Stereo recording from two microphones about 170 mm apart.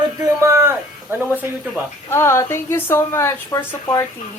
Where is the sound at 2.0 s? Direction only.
15° left (ahead or behind).